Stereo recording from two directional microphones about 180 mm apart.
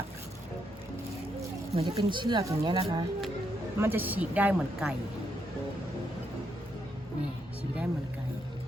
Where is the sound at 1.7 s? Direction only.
30° right (ahead or behind).